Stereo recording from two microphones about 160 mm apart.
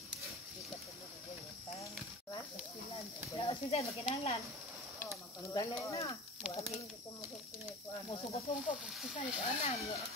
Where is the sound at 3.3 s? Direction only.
35° left (ahead or behind).